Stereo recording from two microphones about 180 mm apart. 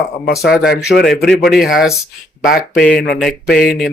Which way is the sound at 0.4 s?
Centre (ahead or behind).